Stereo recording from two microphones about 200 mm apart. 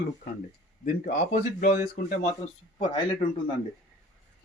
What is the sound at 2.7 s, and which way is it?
Speech, 25° left (ahead or behind).